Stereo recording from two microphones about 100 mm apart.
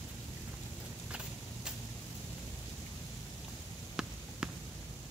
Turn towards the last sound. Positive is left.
turn(degrees=-10)  # may be behind; listen again after turning